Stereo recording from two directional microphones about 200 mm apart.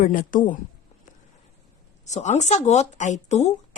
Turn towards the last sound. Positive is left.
turn(degrees=35)  # may be behind; listen again after turning